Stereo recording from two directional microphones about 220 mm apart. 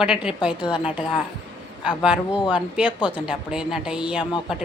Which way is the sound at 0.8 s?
5° right (ahead or behind).